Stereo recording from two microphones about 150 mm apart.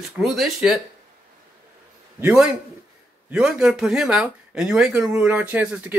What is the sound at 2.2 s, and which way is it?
Speech, 10° right (ahead or behind).